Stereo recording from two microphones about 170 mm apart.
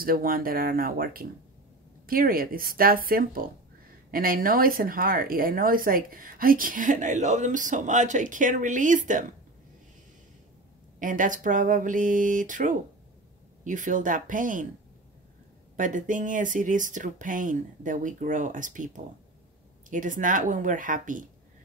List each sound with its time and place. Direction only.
0.0 s speech: 60° right (ahead or behind)
11.0 s speech: 50° right (ahead or behind)
15.7 s speech: 50° right (ahead or behind)